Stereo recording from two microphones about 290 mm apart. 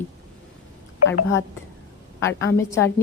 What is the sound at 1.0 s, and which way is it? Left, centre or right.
Speech, left.